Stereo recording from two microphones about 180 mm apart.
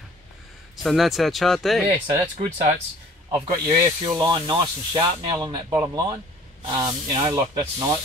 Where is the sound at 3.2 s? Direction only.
20° right (ahead or behind).